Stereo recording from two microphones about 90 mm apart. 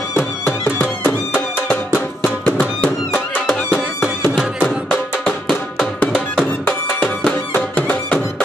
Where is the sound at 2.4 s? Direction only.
15° left (ahead or behind).